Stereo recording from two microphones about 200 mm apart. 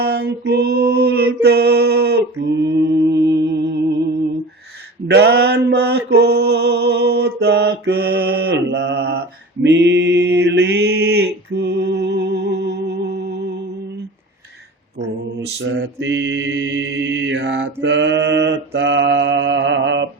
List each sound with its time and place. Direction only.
0.0 s female singing: 50° right (ahead or behind)
2.4 s mantra: 60° right (ahead or behind)
15.4 s mantra: 60° right (ahead or behind)